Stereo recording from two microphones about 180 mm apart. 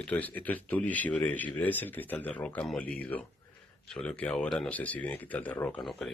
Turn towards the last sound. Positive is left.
turn(degrees=0)  # may be behind; listen again after turning